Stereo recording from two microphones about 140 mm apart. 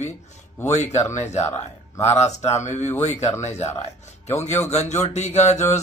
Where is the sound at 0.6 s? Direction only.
55° left (ahead or behind).